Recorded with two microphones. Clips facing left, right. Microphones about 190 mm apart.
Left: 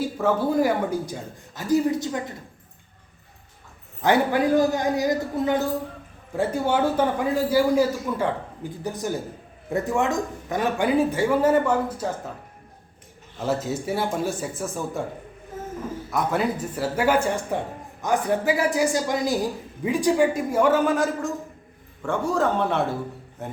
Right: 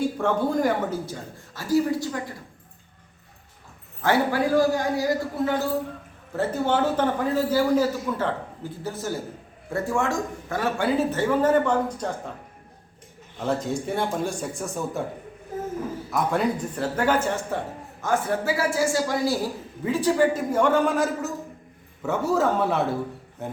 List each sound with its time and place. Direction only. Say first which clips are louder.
0.2 s speech: left 5 dB; 5° left (ahead or behind); by 2.3 s 20° left (ahead or behind)
4.0 s a man's voice: left 2 dB; 20° left (ahead or behind)
13.4 s speech: even; 5° left (ahead or behind)
16.1 s speech: even; 5° left (ahead or behind)